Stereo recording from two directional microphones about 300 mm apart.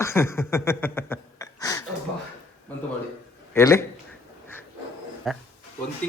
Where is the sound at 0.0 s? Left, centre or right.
Centre.